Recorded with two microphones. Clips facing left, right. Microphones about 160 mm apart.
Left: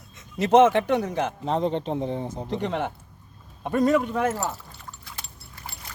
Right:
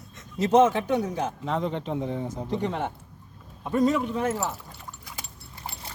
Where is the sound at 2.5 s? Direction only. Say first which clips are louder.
Left 1 dB; 80° left.